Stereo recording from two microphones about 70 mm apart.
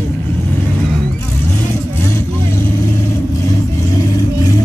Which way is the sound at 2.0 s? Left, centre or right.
Left.